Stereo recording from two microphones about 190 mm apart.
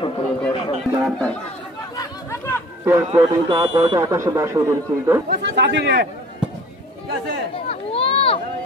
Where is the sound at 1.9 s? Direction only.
15° left (ahead or behind).